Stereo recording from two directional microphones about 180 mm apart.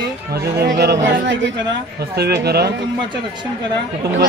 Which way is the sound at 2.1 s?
65° right (ahead or behind).